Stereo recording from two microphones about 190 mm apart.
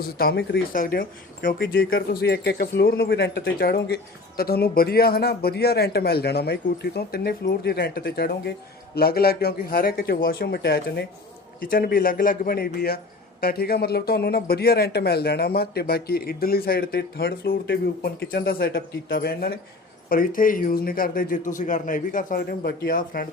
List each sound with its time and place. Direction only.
0.2 s speech: 55° left (ahead or behind)